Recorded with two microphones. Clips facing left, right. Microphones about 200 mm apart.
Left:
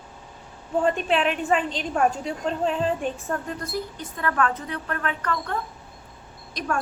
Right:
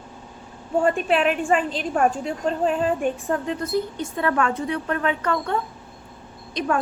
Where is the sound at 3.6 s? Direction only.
25° right (ahead or behind).